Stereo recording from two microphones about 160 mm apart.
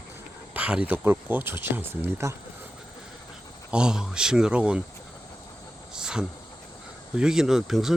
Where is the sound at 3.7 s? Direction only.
5° right (ahead or behind).